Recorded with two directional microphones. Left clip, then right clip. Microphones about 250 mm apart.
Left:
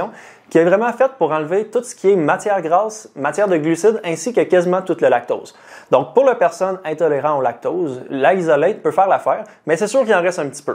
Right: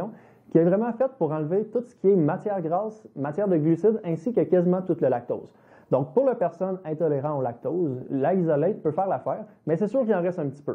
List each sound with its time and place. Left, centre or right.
0.0 s speech: centre
7.7 s a man's voice: left
8.1 s speech: centre